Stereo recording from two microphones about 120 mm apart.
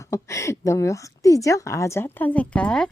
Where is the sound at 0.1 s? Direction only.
25° left (ahead or behind).